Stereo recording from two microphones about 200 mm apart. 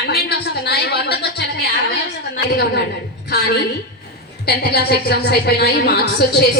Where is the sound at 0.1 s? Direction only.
55° left (ahead or behind).